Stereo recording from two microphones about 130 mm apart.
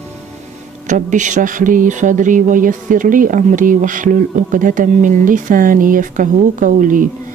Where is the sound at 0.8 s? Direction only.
70° right (ahead or behind).